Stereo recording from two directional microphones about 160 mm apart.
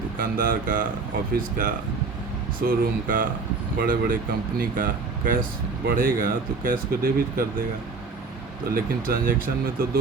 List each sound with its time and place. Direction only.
0.2 s speech: 60° right (ahead or behind)
8.7 s speech: 60° right (ahead or behind)